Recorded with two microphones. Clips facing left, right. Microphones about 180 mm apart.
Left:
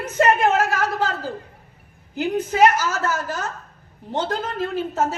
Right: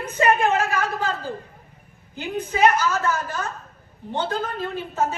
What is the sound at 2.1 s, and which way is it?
Speech, 90° left.